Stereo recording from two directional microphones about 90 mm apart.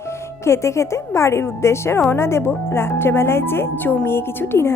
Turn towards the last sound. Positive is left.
turn(degrees=25)  # may be behind; listen again after turning